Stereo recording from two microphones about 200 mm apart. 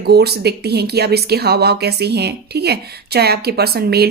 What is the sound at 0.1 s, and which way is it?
A woman's voice, 55° right (ahead or behind).